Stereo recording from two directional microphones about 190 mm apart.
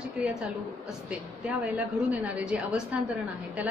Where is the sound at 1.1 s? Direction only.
5° right (ahead or behind).